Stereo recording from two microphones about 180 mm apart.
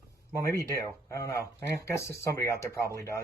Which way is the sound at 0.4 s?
15° left (ahead or behind).